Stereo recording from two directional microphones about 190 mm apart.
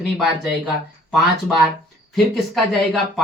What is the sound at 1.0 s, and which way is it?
Speech, centre (ahead or behind).